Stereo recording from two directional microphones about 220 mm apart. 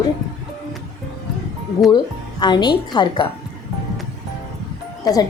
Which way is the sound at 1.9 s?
20° left (ahead or behind).